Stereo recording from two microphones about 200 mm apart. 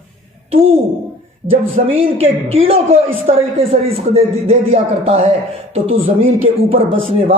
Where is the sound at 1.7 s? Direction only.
30° right (ahead or behind).